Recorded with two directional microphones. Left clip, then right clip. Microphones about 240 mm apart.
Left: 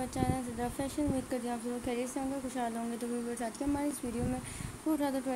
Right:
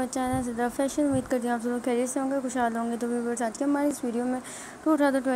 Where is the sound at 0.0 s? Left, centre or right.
Centre.